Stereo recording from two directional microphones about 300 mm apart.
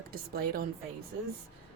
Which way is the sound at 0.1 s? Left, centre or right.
Right.